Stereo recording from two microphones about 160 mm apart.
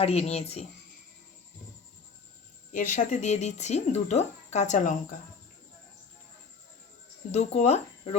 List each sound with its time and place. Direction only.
0.0 s speech: 40° left (ahead or behind)
2.7 s speech: 55° left (ahead or behind)
7.3 s speech: 45° left (ahead or behind)